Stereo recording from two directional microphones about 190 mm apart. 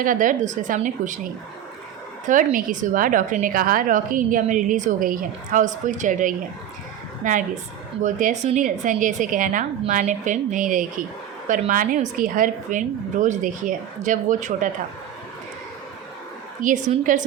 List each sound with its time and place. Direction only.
0.0 s a woman's voice: 45° right (ahead or behind)
16.6 s a woman's voice: 40° right (ahead or behind)